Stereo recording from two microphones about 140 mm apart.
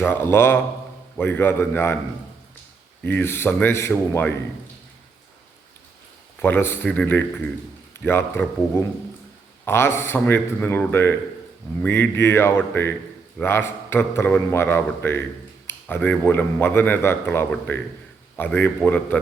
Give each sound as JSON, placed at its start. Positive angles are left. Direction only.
{"t": 0.0, "sound": "a man's voice", "side_deg": 15}
{"t": 3.0, "sound": "a man's voice", "side_deg": 15}
{"t": 6.4, "sound": "a man's voice", "side_deg": 15}